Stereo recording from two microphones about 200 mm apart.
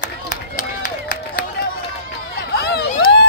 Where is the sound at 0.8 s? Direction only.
40° left (ahead or behind).